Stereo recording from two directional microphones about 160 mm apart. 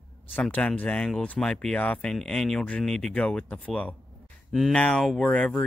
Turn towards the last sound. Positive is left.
turn(degrees=5)  # may be behind; listen again after turning